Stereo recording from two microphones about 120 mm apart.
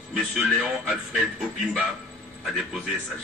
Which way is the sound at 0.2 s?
Centre (ahead or behind).